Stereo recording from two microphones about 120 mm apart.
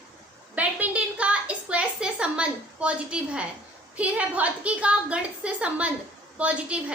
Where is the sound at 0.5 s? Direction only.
10° right (ahead or behind).